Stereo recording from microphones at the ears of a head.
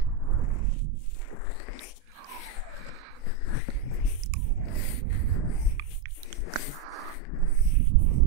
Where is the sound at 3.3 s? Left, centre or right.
Left.